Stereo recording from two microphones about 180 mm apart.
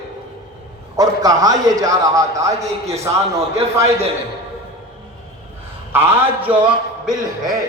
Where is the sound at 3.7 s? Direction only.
15° right (ahead or behind).